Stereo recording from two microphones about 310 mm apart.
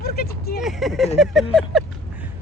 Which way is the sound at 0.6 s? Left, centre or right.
Centre.